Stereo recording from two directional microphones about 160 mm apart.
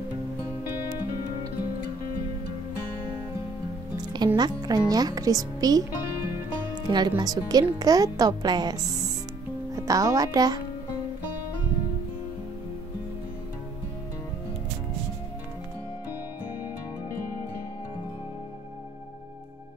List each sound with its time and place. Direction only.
3.9 s music: 25° right (ahead or behind)
4.4 s speech: 25° right (ahead or behind)
6.9 s speech: 25° right (ahead or behind)